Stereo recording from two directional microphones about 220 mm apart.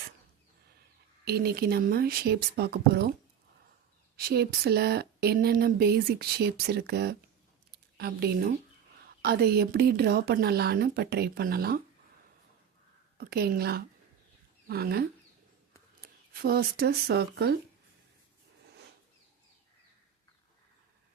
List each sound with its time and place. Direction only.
1.2 s speech: 45° right (ahead or behind)
4.2 s speech: 45° right (ahead or behind)
13.1 s speech: 45° right (ahead or behind)